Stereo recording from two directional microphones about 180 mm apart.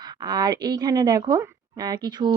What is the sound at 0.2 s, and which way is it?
Speech, 25° right (ahead or behind).